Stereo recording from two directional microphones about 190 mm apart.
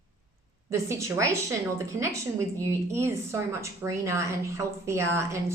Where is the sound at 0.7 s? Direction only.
15° right (ahead or behind).